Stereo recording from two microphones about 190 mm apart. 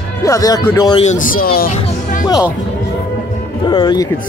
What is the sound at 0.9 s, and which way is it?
Speech, 40° left (ahead or behind).